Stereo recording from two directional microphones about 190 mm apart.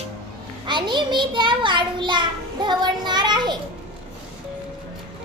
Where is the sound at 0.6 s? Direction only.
25° right (ahead or behind).